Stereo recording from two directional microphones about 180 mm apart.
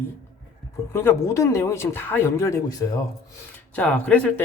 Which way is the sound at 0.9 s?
15° left (ahead or behind).